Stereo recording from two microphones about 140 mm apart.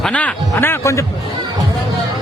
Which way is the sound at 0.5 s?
20° left (ahead or behind).